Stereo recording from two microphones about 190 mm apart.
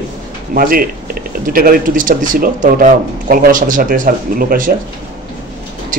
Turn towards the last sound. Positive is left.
turn(degrees=-45)  # may be behind; listen again after turning